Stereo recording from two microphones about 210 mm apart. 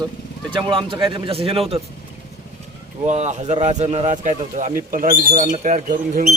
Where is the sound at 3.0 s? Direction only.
35° right (ahead or behind).